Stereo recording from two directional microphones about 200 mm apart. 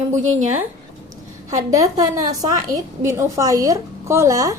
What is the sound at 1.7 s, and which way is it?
Speech, 15° right (ahead or behind).